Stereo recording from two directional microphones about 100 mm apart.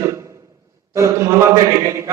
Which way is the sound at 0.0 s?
30° right (ahead or behind).